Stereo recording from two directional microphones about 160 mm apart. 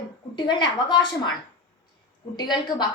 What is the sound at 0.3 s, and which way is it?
Speech, 25° left (ahead or behind).